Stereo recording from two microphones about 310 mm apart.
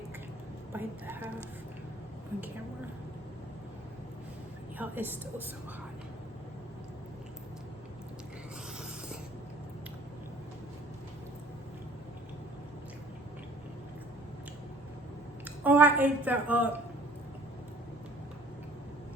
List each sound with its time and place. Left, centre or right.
0.7 s a sound: centre
4.8 s a woman's voice: centre
15.6 s a woman's voice: centre